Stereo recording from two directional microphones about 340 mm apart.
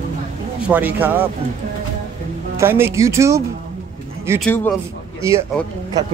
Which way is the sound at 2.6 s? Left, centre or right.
Centre.